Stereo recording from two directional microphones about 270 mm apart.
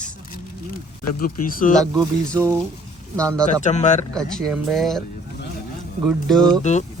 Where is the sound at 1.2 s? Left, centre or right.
Left.